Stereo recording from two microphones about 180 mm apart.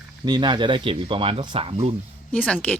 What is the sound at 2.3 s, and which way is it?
Speech, 5° left (ahead or behind).